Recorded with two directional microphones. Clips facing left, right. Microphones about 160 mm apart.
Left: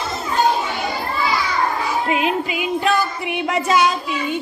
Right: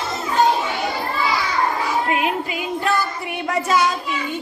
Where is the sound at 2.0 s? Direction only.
20° left (ahead or behind).